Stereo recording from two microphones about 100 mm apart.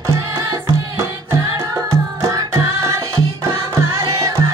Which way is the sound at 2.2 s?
35° right (ahead or behind).